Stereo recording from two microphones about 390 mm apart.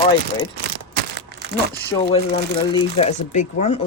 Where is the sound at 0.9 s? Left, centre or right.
Right.